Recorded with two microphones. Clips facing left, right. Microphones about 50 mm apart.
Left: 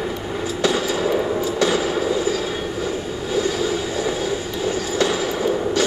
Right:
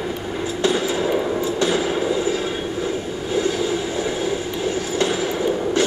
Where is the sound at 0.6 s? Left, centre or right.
Right.